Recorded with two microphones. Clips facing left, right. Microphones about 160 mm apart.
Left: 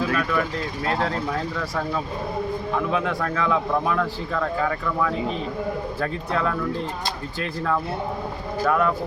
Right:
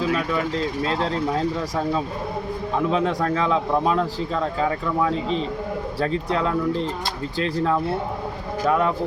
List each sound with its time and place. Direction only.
0.1 s a man's voice: 20° right (ahead or behind)
8.6 s speech: 20° right (ahead or behind)